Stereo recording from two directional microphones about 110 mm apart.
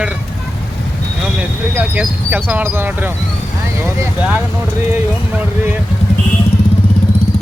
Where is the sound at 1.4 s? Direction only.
15° right (ahead or behind).